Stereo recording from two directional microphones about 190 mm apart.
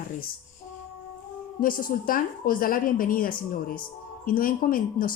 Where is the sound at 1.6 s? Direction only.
45° left (ahead or behind).